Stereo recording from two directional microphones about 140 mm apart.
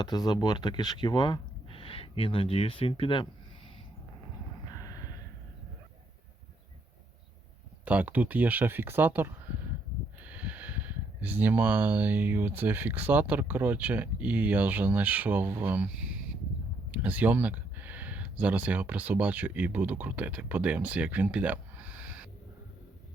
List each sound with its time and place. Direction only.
0.0 s speech: 30° left (ahead or behind)
4.7 s a sound: 25° left (ahead or behind)
7.9 s speech: 10° right (ahead or behind)
16.9 s speech: 10° right (ahead or behind)